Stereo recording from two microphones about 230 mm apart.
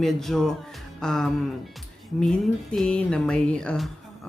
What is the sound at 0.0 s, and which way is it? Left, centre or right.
Speech, centre.